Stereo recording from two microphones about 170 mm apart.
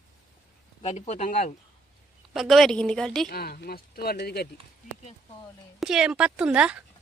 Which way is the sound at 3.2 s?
65° left (ahead or behind).